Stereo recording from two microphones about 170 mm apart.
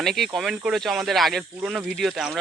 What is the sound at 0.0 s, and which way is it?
Speech, centre (ahead or behind).